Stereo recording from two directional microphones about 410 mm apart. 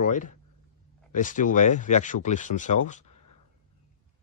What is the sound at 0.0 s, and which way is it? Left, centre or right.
Speech, centre.